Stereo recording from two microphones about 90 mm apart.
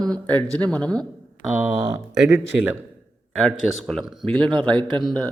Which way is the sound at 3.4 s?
5° left (ahead or behind).